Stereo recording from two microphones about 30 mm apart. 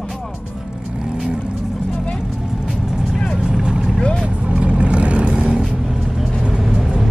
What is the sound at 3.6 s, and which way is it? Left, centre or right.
Vehicle, right.